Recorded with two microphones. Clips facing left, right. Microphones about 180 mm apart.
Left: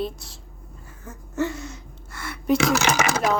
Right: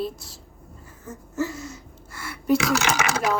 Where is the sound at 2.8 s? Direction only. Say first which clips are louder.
Left 2 dB; 40° left (ahead or behind).